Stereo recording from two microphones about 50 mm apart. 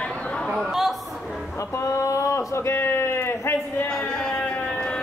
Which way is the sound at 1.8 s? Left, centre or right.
Left.